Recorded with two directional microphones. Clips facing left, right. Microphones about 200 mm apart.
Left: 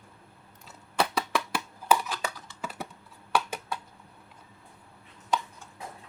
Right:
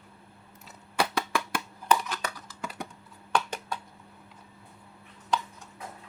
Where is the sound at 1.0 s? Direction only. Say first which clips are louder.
Left 1 dB; centre (ahead or behind).